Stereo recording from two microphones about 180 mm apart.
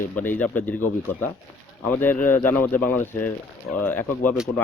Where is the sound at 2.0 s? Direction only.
10° left (ahead or behind).